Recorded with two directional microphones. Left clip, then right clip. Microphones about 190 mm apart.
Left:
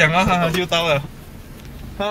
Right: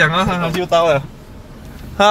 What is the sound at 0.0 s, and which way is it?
Speech, 25° right (ahead or behind).